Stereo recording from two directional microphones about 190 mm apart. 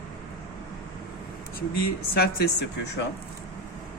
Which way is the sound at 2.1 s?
55° left (ahead or behind).